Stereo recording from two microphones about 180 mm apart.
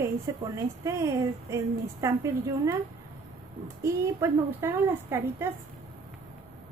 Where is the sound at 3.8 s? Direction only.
15° right (ahead or behind).